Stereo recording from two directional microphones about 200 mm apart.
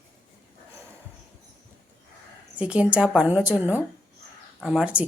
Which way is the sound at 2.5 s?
5° right (ahead or behind).